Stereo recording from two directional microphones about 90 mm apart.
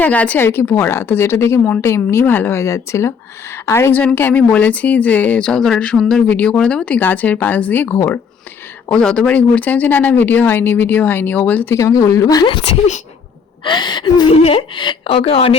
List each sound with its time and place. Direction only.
0.0 s a woman's voice: 15° left (ahead or behind)
4.0 s speech: 20° left (ahead or behind)
8.9 s speech: 10° left (ahead or behind)
11.7 s speech: 35° left (ahead or behind)
13.7 s a woman's voice: 60° left (ahead or behind); by 15.5 s 90° left